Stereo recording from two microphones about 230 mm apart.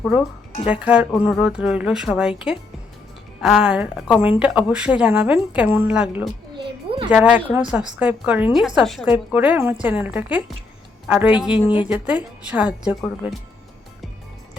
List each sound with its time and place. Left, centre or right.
0.6 s a woman's voice: centre
3.4 s a woman's voice: centre
6.6 s a sound: right
7.1 s a woman's voice: centre
11.6 s a woman's voice: left
11.9 s a woman's voice: centre